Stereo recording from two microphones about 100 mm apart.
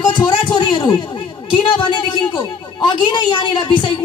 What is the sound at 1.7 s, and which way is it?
Speech, 50° left (ahead or behind).